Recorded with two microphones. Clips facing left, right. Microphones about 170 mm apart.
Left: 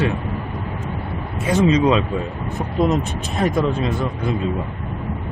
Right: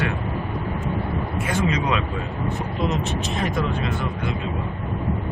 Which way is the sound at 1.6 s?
25° left (ahead or behind).